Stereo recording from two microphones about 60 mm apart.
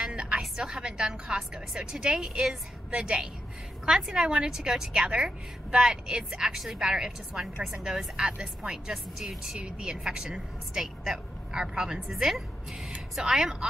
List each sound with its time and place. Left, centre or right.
0.0 s music: centre
0.4 s a woman's voice: centre